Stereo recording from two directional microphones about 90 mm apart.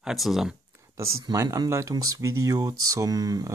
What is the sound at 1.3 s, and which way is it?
Speech, 35° right (ahead or behind).